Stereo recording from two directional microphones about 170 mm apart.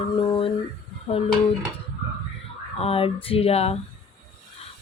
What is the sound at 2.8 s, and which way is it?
Speech, 35° left (ahead or behind).